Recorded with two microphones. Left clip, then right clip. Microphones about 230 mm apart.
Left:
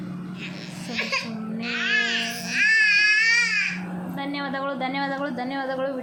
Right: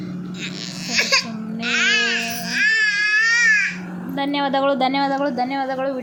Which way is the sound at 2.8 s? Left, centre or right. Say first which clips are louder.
Right 1 dB; right.